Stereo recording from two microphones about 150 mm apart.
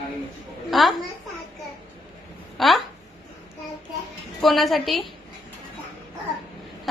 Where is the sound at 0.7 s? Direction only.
Centre (ahead or behind).